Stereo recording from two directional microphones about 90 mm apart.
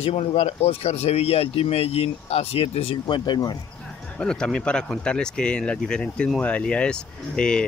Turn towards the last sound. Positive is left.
turn(degrees=10)  # may be behind; listen again after turning